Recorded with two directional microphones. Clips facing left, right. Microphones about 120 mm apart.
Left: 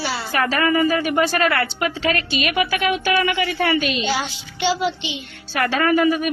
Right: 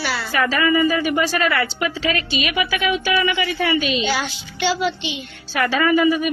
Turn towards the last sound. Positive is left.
turn(degrees=50)  # may be behind; listen again after turning